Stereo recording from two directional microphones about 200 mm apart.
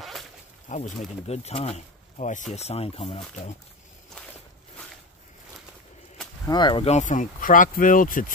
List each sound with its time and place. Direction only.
0.0 s a sound: centre (ahead or behind)
0.7 s speech: 35° left (ahead or behind)
6.4 s speech: 20° left (ahead or behind); by 8.3 s 45° left (ahead or behind)